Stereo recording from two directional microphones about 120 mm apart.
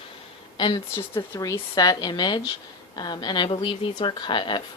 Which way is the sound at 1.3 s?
30° left (ahead or behind).